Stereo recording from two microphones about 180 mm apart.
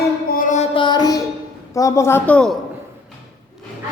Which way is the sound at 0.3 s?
50° left (ahead or behind).